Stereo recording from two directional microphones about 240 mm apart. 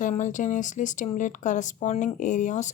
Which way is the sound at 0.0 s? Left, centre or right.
Left.